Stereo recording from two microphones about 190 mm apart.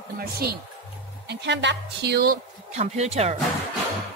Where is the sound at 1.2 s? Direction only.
65° right (ahead or behind).